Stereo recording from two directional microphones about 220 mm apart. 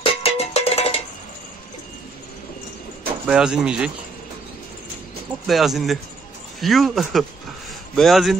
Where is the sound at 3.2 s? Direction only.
5° right (ahead or behind).